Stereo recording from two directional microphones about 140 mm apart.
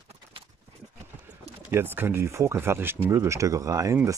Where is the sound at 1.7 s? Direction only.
15° right (ahead or behind).